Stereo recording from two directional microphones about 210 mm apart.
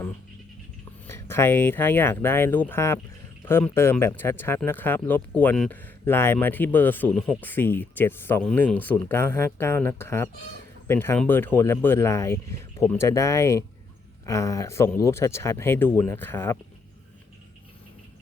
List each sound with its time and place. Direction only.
1.0 s speech: 10° left (ahead or behind)